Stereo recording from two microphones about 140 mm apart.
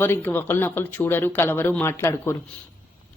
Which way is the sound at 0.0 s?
15° left (ahead or behind).